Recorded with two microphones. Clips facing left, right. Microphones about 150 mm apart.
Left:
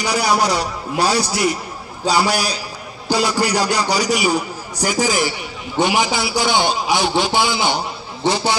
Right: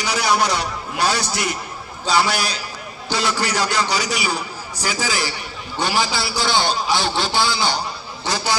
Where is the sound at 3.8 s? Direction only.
40° left (ahead or behind).